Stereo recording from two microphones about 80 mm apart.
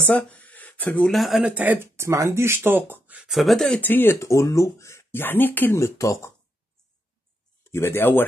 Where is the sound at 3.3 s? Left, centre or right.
Centre.